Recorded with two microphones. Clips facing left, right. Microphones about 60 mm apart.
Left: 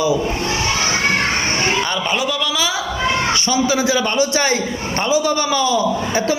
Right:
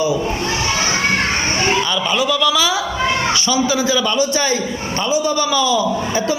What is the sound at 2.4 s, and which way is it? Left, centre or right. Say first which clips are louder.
Speech: right 4 dB; left.